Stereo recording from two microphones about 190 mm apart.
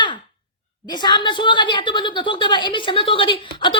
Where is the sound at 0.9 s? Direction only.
25° left (ahead or behind).